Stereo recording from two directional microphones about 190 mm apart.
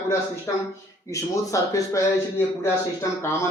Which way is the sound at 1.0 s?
15° left (ahead or behind).